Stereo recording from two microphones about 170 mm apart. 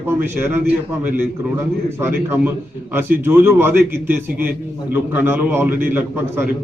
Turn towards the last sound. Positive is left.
turn(degrees=-10)  # may be behind; listen again after turning